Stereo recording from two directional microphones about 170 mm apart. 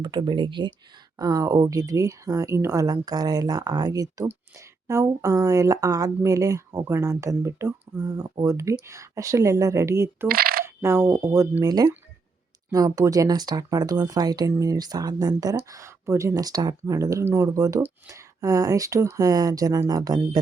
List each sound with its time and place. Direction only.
0.0 s speech: 25° right (ahead or behind)
10.2 s coin: 60° right (ahead or behind)
10.8 s speech: 15° right (ahead or behind)